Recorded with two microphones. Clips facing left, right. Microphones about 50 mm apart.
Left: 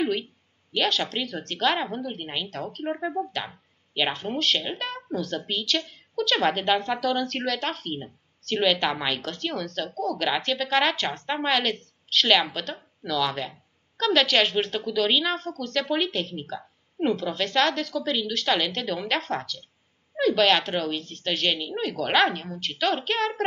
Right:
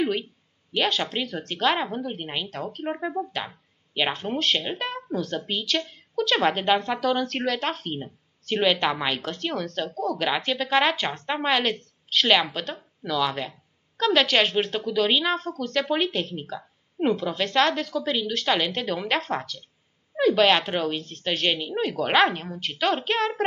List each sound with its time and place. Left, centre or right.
0.7 s a woman's voice: centre